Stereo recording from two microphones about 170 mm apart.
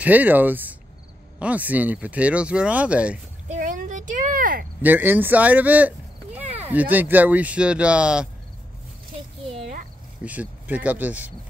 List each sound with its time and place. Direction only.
0.0 s speech: 10° right (ahead or behind)
3.4 s a sound: 45° right (ahead or behind)
4.8 s speech: 10° right (ahead or behind)
10.2 s speech: 10° right (ahead or behind)